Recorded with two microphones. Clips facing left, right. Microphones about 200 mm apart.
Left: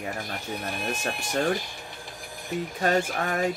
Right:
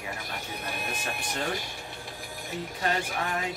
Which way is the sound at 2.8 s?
45° left (ahead or behind).